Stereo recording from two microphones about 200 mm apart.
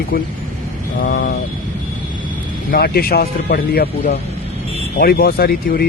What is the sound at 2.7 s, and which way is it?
Speech, 50° left (ahead or behind).